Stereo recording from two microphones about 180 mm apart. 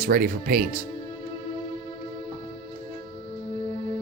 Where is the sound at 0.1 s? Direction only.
55° right (ahead or behind).